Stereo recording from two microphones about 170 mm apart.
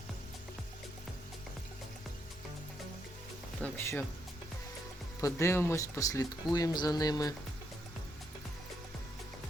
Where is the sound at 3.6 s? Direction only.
15° left (ahead or behind).